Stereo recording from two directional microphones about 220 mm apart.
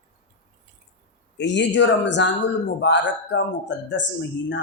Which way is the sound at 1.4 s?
55° left (ahead or behind).